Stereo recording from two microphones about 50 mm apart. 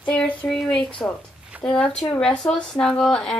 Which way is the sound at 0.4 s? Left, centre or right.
Left.